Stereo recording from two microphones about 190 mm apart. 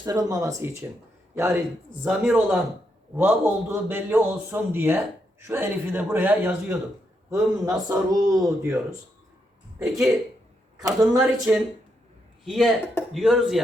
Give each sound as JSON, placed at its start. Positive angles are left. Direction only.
{"t": 0.0, "sound": "a man's voice", "side_deg": -20}
{"t": 9.7, "sound": "speech", "side_deg": 0}
{"t": 11.2, "sound": "speech", "side_deg": -5}